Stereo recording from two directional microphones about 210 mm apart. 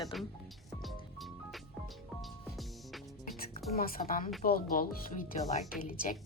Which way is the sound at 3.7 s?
45° left (ahead or behind).